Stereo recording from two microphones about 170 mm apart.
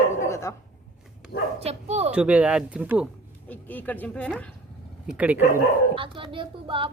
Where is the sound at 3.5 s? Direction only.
10° left (ahead or behind).